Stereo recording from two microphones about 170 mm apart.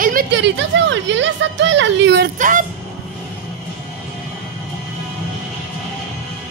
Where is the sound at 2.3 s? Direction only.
50° right (ahead or behind).